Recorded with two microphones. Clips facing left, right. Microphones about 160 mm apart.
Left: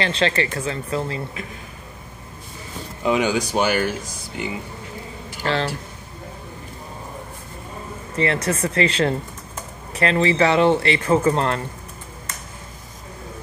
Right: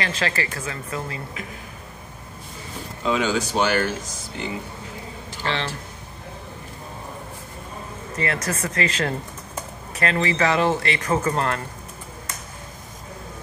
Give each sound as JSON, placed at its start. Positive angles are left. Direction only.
{"t": 0.0, "sound": "speech", "side_deg": 30}
{"t": 3.0, "sound": "speech", "side_deg": 15}
{"t": 5.4, "sound": "speech", "side_deg": 40}
{"t": 8.2, "sound": "speech", "side_deg": 30}